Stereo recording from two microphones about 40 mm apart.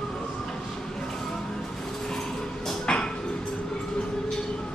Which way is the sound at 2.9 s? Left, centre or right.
Left.